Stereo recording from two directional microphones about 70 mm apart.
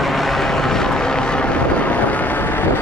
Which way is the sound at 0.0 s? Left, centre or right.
Centre.